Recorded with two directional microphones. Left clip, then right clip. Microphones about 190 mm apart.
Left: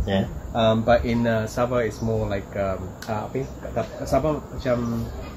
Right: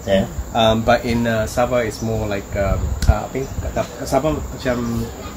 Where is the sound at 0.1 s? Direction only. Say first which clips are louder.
Right 8 dB; 35° left (ahead or behind).